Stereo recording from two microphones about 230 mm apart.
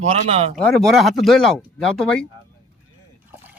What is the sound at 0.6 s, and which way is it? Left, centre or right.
Speech, centre.